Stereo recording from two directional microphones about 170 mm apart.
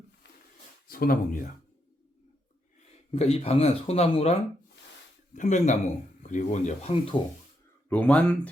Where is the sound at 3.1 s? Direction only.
35° left (ahead or behind).